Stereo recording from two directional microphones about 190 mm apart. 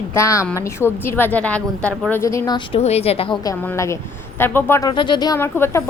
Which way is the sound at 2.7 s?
35° left (ahead or behind).